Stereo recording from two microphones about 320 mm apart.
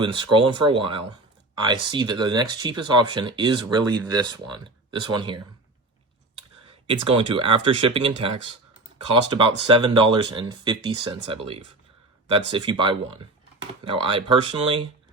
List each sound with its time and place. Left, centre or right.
0.0 s speech: centre
6.7 s speech: centre
9.4 s speech: centre